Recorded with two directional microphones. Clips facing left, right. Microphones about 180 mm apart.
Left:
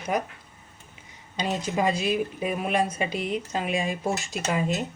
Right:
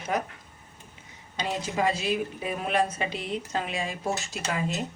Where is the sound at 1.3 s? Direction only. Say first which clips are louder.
Left 2 dB; 15° left (ahead or behind).